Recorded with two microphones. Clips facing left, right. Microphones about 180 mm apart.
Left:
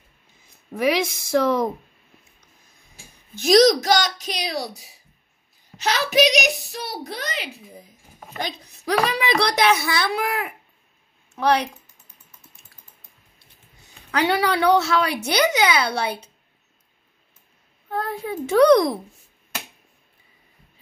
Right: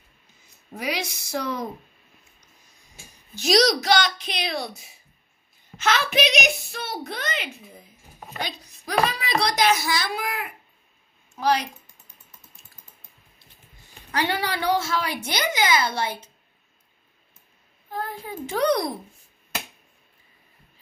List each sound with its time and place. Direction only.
0.8 s speech: 90° left
3.3 s a woman's voice: 50° left (ahead or behind); by 7.6 s 35° left (ahead or behind)
8.4 s speech: 50° left (ahead or behind)
8.8 s speech: 70° left (ahead or behind)
11.3 s speech: 65° left (ahead or behind)
14.3 s a woman's voice: 70° left (ahead or behind)
17.8 s a woman's voice: 70° left (ahead or behind)